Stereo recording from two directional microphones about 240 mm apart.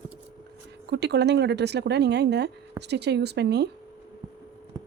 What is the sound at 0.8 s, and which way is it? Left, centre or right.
Speech, right.